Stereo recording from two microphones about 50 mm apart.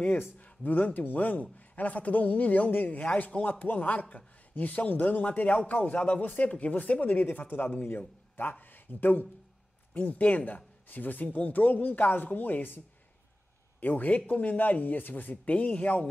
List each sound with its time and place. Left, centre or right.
0.5 s a man's voice: left
3.4 s a man's voice: left